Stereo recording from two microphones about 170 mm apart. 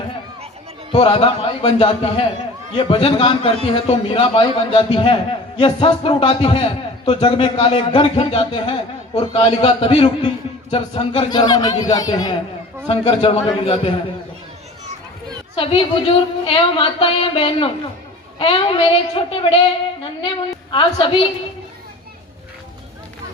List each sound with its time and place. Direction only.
0.9 s a woman's voice: 30° left (ahead or behind)
15.5 s a woman's voice: 30° left (ahead or behind)